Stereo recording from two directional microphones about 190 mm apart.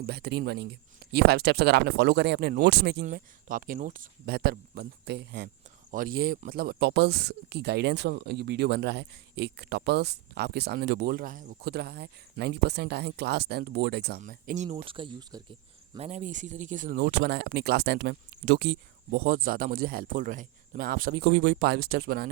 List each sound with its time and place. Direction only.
0.0 s speech: 60° right (ahead or behind)
3.0 s speech: 45° right (ahead or behind); by 5.5 s 60° right (ahead or behind)
5.9 s speech: 50° right (ahead or behind)
14.2 s speech: 45° right (ahead or behind); by 15.4 s 25° right (ahead or behind)
16.0 s speech: 35° right (ahead or behind); by 22.3 s 55° right (ahead or behind)